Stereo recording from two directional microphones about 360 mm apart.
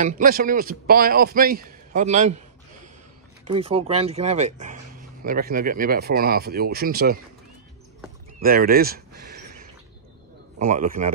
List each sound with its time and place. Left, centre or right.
0.0 s a man's voice: right
3.4 s a man's voice: centre
8.4 s speech: right
10.7 s a man's voice: right